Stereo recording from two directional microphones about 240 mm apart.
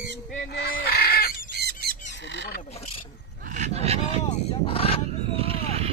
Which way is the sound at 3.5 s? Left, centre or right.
Right.